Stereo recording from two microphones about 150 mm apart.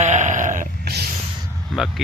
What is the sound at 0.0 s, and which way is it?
Sheep, 50° right (ahead or behind).